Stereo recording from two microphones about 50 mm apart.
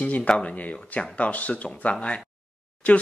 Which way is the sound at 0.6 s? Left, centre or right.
Left.